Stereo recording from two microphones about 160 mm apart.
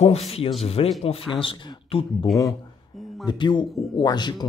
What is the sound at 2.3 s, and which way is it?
Speech, centre (ahead or behind).